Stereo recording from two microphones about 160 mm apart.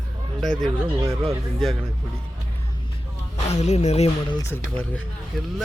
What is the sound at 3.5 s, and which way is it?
Music, 45° left (ahead or behind).